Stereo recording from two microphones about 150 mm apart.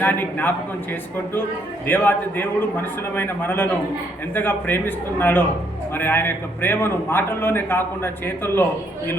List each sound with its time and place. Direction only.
0.0 s a man's voice: 10° left (ahead or behind)
1.9 s a man's voice: 10° left (ahead or behind)